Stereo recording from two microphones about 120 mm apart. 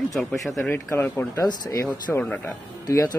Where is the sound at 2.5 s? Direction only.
25° left (ahead or behind).